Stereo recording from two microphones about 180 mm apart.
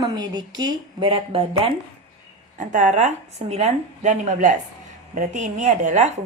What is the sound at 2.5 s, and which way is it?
A woman's voice, 45° right (ahead or behind).